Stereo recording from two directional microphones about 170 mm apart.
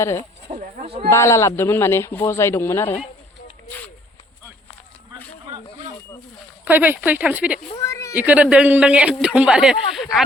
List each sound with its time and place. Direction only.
0.0 s speech: 15° left (ahead or behind)
0.5 s a sound: 35° right (ahead or behind)
1.1 s speech: 15° left (ahead or behind)
6.7 s speech: 10° right (ahead or behind)
7.8 s a sound: 15° left (ahead or behind)
8.1 s speech: 10° right (ahead or behind)